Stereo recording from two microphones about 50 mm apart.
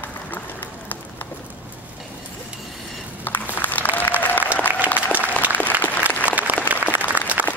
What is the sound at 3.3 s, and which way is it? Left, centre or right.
Applause, left.